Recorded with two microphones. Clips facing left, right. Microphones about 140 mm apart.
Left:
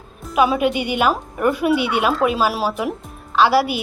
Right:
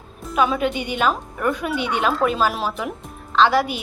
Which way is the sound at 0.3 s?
10° left (ahead or behind).